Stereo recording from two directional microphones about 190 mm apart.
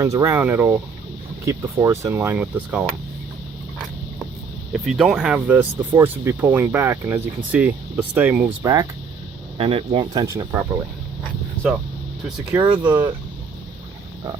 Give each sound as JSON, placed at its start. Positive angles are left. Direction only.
{"t": 0.0, "sound": "speech", "side_deg": -15}
{"t": 4.7, "sound": "speech", "side_deg": 0}
{"t": 9.6, "sound": "speech", "side_deg": -30}
{"t": 12.8, "sound": "speech", "side_deg": -15}